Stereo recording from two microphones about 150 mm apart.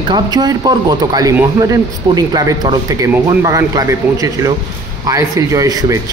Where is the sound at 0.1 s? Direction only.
25° right (ahead or behind).